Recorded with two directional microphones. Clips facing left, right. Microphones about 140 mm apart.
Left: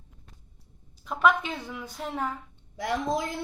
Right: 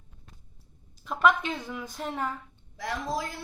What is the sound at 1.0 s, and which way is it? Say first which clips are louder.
Speech: even; centre (ahead or behind).